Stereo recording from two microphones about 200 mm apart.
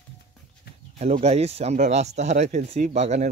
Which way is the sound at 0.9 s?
30° right (ahead or behind).